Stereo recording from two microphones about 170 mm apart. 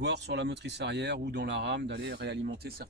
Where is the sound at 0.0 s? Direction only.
90° right.